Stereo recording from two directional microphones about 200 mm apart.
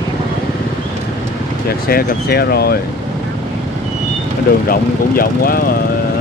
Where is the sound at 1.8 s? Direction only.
50° left (ahead or behind).